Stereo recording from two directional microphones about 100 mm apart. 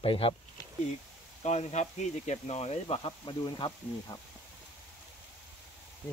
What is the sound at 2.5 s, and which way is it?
Speech, 90° left.